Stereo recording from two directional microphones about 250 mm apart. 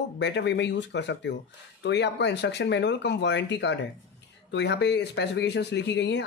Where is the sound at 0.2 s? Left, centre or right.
Left.